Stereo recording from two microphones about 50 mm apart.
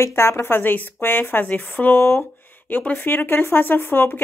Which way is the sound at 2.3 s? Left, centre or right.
Left.